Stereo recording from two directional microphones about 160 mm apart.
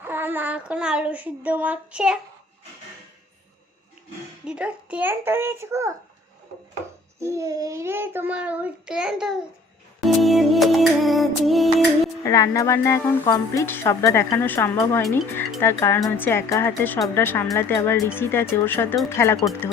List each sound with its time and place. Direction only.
0.0 s child singing: 15° right (ahead or behind)
4.4 s child singing: 5° right (ahead or behind)
7.2 s child singing: 20° right (ahead or behind); by 9.4 s 5° right (ahead or behind)
10.0 s music: centre (ahead or behind)
12.2 s a woman's voice: 20° left (ahead or behind)